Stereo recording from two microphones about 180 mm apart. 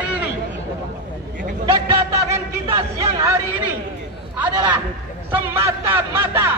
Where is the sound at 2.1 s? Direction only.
15° right (ahead or behind).